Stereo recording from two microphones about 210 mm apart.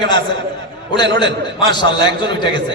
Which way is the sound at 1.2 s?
20° left (ahead or behind).